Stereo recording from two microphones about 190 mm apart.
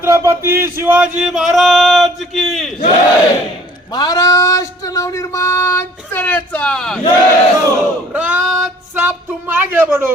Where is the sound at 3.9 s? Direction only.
20° left (ahead or behind); by 7.0 s 5° left (ahead or behind).